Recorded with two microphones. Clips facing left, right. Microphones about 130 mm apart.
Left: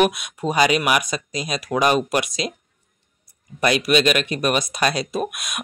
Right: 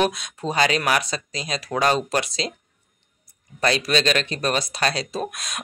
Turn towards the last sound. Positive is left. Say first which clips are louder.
# left 3 dB
turn(degrees=15)  # may be behind; listen again after turning